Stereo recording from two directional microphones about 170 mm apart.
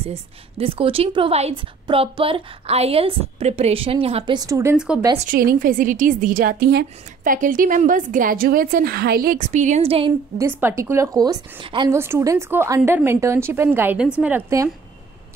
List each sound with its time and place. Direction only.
0.0 s a woman's voice: 35° right (ahead or behind)
4.2 s a woman's voice: 25° right (ahead or behind)
4.7 s speech: 5° right (ahead or behind)
5.3 s a woman's voice: 55° right (ahead or behind); by 10.1 s 35° right (ahead or behind)
10.3 s a woman's voice: 15° right (ahead or behind)
11.9 s a woman's voice: 15° right (ahead or behind)